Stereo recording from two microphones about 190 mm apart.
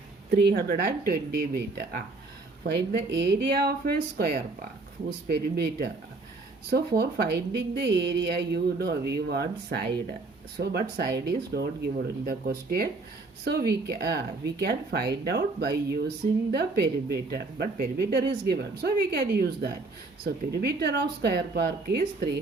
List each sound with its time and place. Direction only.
0.3 s speech: 55° right (ahead or behind)